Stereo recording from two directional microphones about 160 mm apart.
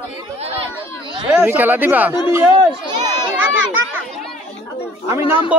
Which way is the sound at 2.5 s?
30° right (ahead or behind).